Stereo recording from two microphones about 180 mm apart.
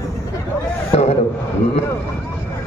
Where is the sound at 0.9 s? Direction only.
35° left (ahead or behind).